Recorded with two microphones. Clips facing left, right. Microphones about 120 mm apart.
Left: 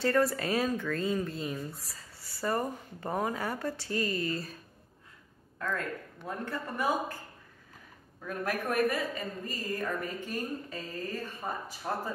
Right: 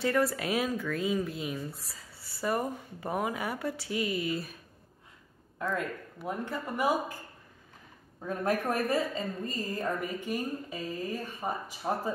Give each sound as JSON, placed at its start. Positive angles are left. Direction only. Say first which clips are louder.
{"t": 0.0, "sound": "speech", "louder": "left 1 dB", "side_deg": 0}
{"t": 5.6, "sound": "a woman's voice", "louder": "right 2 dB", "side_deg": -15}
{"t": 8.2, "sound": "a woman's voice", "louder": "right 4 dB", "side_deg": -25}